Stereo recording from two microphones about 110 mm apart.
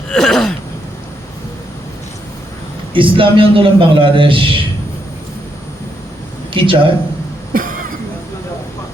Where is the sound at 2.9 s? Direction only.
50° right (ahead or behind).